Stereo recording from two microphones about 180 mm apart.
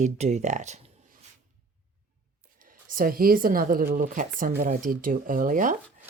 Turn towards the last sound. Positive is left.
turn(degrees=-50)  # may be behind; listen again after turning